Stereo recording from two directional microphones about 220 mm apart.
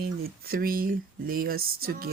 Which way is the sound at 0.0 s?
45° right (ahead or behind).